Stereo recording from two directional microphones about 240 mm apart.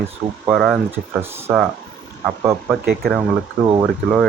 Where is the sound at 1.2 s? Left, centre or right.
Centre.